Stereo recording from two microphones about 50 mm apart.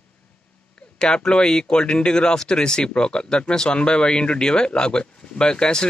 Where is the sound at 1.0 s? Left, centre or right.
Centre.